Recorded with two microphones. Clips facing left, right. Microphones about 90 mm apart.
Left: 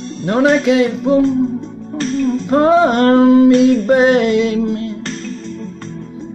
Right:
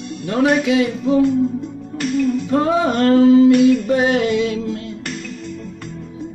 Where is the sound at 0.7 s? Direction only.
90° left.